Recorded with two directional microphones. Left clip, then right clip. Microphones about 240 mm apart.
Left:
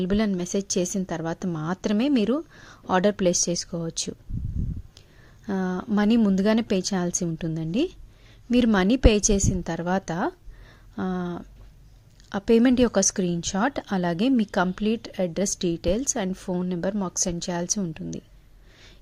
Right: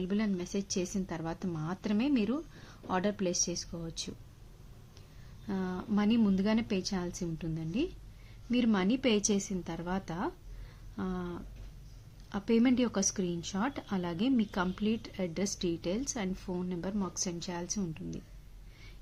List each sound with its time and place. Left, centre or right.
0.0 s a woman's voice: left
5.5 s a woman's voice: left